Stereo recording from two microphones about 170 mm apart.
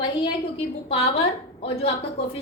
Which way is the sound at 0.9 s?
35° left (ahead or behind).